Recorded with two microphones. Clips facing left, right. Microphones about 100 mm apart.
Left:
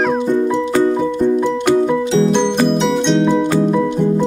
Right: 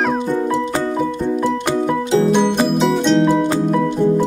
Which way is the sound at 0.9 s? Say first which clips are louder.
Left 4 dB; 5° right (ahead or behind).